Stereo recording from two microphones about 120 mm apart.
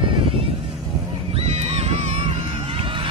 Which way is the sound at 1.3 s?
60° right (ahead or behind).